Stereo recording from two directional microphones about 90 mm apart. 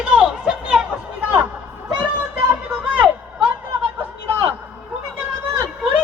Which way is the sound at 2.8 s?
20° right (ahead or behind).